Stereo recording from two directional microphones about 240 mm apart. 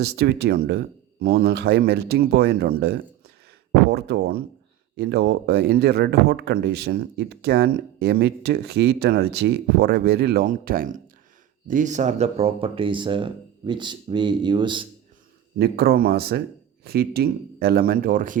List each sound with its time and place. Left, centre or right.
0.0 s speech: right; by 14.8 s centre
15.5 s speech: right